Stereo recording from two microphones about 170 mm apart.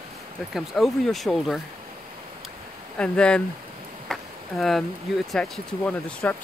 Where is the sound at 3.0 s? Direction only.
5° left (ahead or behind).